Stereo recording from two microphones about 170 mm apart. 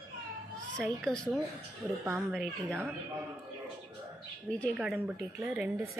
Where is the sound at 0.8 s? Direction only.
5° left (ahead or behind).